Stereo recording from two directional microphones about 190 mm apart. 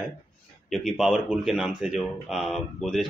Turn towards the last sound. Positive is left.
turn(degrees=0)  # may be behind; listen again after turning